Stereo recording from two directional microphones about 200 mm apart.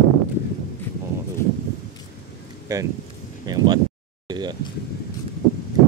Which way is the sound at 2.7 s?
20° right (ahead or behind).